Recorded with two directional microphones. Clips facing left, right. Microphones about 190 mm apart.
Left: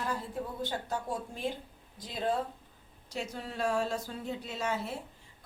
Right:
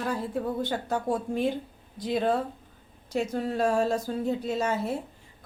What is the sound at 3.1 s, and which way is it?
A woman's voice, 50° right (ahead or behind).